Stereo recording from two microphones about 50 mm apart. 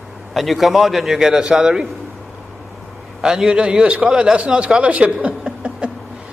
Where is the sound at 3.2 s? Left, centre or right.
Centre.